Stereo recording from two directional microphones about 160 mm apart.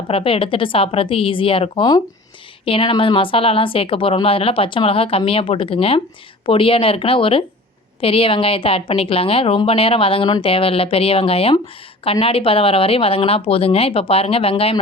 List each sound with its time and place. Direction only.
0.1 s a woman's voice: 35° left (ahead or behind)